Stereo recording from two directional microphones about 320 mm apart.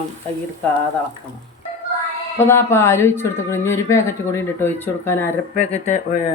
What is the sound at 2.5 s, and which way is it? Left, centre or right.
Speech, centre.